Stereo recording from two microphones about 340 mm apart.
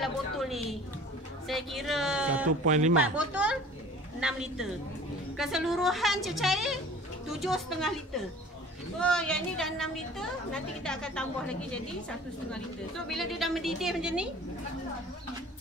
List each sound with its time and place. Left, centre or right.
0.0 s a sound: centre
1.5 s a woman's voice: centre
2.6 s speech: right
3.2 s a woman's voice: centre
9.0 s a woman's voice: centre